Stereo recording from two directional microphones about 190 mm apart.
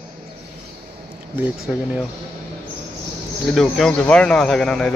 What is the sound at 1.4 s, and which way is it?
Speech, 5° right (ahead or behind).